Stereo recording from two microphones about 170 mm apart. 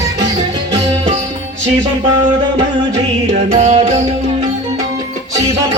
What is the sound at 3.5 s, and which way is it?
Music, 45° right (ahead or behind).